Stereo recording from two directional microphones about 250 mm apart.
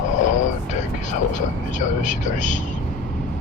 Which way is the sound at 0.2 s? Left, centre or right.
Left.